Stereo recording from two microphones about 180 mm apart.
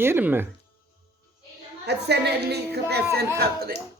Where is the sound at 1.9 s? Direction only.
65° right (ahead or behind).